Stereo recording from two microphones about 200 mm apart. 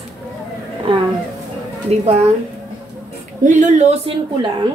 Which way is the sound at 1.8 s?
30° right (ahead or behind).